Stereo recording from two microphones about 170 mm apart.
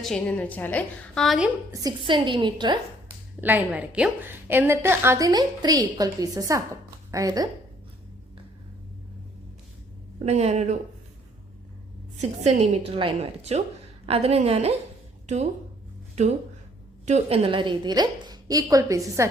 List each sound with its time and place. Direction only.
0.0 s a woman's voice: 5° left (ahead or behind)
1.7 s a woman's voice: 25° right (ahead or behind)
3.4 s a woman's voice: 10° right (ahead or behind)
10.2 s a woman's voice: 40° right (ahead or behind)
12.1 s a woman's voice: 40° right (ahead or behind)
17.1 s a woman's voice: 40° right (ahead or behind); by 19.3 s 20° right (ahead or behind)